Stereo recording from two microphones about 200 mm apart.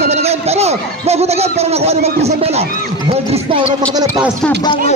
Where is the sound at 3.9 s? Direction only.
20° right (ahead or behind).